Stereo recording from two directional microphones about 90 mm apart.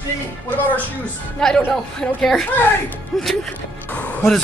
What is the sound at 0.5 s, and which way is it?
Speech, 20° left (ahead or behind).